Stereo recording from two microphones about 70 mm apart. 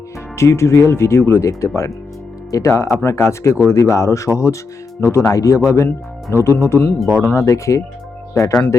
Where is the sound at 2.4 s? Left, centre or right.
Left.